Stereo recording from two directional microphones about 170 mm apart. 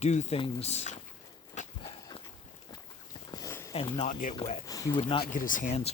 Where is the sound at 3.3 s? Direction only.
15° left (ahead or behind).